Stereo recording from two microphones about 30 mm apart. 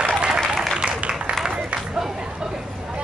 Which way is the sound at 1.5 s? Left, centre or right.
Right.